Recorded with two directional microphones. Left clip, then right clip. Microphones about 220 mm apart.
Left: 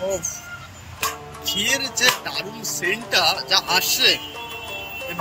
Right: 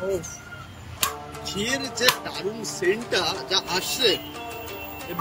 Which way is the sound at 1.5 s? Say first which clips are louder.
Left 6 dB; 10° right (ahead or behind).